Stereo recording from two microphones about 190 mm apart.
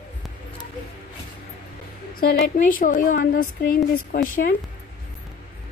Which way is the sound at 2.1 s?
50° left (ahead or behind).